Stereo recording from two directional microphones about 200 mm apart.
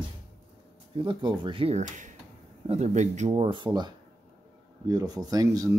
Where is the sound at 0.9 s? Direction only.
25° right (ahead or behind).